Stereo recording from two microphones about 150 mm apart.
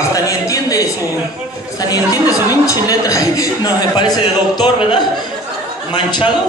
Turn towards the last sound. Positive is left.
turn(degrees=30)  # may be behind; listen again after turning